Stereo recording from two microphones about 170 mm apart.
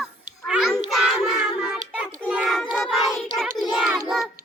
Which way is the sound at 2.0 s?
5° right (ahead or behind).